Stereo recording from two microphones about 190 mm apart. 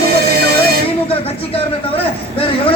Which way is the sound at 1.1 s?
30° left (ahead or behind).